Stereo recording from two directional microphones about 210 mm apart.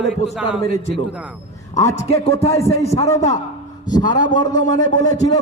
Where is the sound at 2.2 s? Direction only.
30° left (ahead or behind).